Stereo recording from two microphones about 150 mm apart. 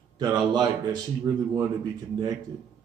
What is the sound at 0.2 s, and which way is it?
Speech, 25° right (ahead or behind).